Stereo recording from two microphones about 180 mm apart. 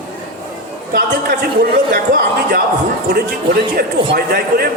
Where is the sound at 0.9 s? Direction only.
55° right (ahead or behind).